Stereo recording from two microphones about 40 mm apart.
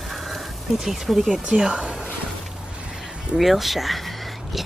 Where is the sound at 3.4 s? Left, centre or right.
Centre.